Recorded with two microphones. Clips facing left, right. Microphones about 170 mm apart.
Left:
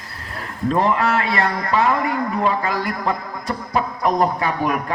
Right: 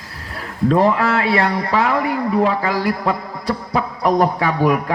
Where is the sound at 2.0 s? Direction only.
30° right (ahead or behind).